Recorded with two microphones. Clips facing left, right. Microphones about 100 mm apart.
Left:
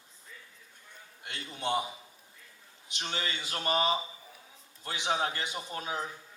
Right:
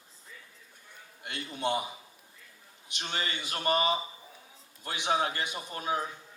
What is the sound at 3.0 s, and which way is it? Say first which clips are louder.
Speech: right 1 dB; 20° right (ahead or behind).